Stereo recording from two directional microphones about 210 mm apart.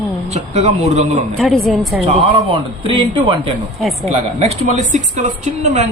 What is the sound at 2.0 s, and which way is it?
A woman's voice, 30° right (ahead or behind).